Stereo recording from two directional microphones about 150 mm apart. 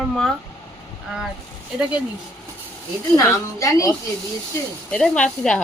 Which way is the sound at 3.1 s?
20° left (ahead or behind).